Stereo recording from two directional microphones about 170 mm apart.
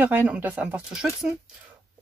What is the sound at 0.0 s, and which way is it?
Speech, 10° right (ahead or behind).